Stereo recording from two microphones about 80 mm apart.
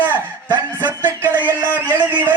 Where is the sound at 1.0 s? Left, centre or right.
Right.